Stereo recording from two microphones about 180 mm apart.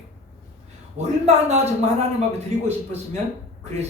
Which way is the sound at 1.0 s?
40° right (ahead or behind).